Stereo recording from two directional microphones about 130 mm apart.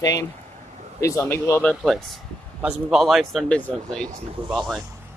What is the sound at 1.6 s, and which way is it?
Speech, centre (ahead or behind).